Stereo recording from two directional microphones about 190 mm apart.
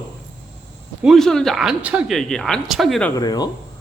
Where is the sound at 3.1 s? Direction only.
20° left (ahead or behind).